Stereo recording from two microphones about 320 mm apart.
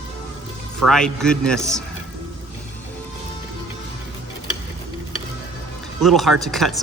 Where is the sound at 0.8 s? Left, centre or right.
Centre.